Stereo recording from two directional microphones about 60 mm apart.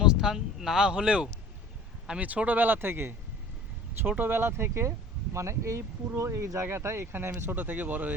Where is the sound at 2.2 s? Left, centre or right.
Right.